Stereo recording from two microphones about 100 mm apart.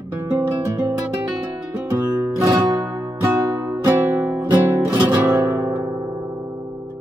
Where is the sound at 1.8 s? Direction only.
30° right (ahead or behind).